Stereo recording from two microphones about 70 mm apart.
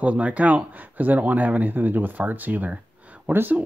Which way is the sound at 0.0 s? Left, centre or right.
Centre.